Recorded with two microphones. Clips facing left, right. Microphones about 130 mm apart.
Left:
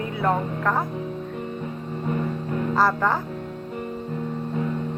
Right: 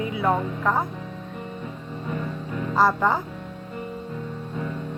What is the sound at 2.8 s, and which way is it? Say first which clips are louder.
Speech: right 2 dB; 15° right (ahead or behind).